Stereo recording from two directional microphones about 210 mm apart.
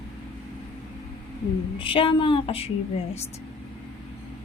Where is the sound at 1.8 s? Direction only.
25° left (ahead or behind).